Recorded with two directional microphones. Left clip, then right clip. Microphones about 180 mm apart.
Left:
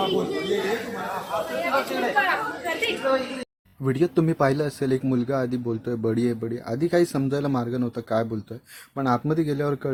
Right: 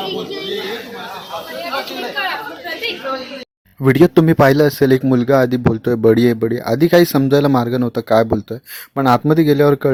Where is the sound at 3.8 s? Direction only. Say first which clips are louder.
Right 11 dB; 40° right (ahead or behind).